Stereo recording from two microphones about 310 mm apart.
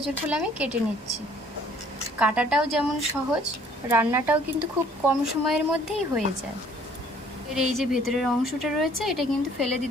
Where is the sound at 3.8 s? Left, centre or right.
Centre.